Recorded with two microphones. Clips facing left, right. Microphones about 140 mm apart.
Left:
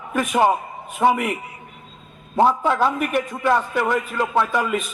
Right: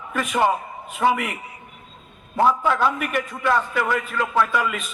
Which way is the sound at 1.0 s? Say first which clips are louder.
Left 2 dB; 25° left (ahead or behind).